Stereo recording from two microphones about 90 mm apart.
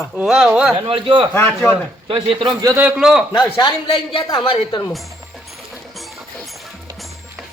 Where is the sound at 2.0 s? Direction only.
80° right.